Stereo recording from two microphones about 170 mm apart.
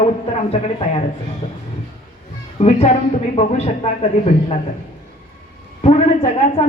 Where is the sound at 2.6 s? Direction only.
40° left (ahead or behind).